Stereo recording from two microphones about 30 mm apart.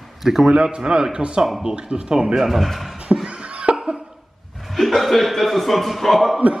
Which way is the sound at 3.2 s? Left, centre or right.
Right.